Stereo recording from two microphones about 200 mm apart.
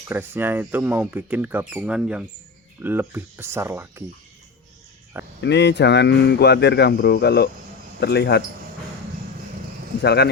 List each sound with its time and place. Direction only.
0.1 s speech: 10° right (ahead or behind)
5.4 s speech: 60° left (ahead or behind)
10.0 s speech: 55° left (ahead or behind)